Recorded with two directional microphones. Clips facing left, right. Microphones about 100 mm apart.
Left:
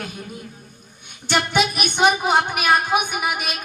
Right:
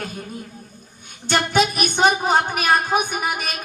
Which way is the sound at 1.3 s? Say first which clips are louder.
Right 1 dB; 40° right (ahead or behind).